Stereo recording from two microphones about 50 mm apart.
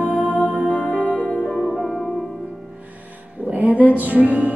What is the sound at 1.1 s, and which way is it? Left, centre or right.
Music, left.